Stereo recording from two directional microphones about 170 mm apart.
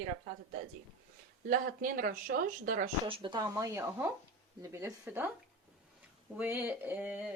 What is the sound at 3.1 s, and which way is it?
Speech, 25° right (ahead or behind).